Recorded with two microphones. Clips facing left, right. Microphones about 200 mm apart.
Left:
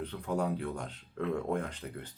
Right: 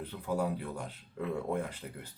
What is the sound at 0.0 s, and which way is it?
Speech, 5° right (ahead or behind).